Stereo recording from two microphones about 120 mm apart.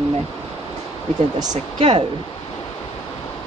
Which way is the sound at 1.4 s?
35° right (ahead or behind).